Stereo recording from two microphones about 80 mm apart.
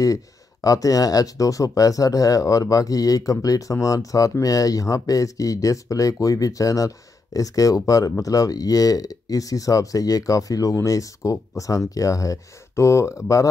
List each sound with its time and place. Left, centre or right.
0.0 s speech: left